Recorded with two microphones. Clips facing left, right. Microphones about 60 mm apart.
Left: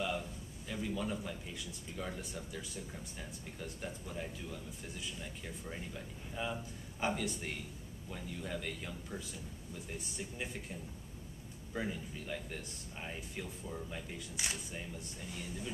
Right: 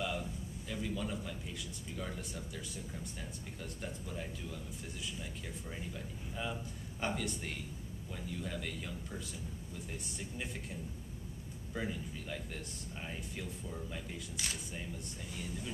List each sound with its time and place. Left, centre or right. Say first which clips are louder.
0.0 s a sound: even; centre
2.0 s speech: left 1 dB; centre
5.7 s speech: even; centre
11.7 s speech: even; centre
14.3 s speech: left 2 dB; left